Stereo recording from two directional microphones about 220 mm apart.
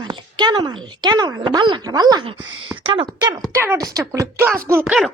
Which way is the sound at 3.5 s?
15° right (ahead or behind).